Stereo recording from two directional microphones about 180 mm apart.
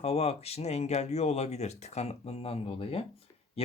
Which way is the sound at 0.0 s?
35° left (ahead or behind).